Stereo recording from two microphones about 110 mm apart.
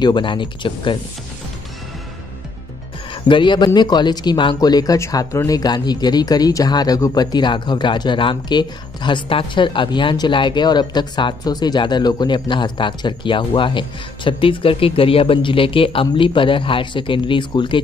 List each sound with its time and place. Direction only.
0.0 s speech: 45° left (ahead or behind)
3.3 s speech: 45° left (ahead or behind)